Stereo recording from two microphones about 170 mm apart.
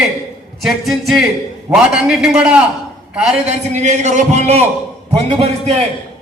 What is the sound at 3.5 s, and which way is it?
A man's voice, 45° right (ahead or behind).